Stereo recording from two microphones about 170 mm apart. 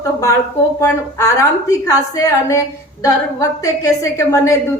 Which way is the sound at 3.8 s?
20° left (ahead or behind).